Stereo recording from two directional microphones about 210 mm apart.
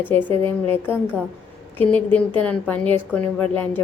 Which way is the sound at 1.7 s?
5° left (ahead or behind).